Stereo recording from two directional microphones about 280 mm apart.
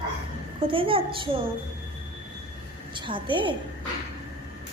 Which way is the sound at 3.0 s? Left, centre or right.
Centre.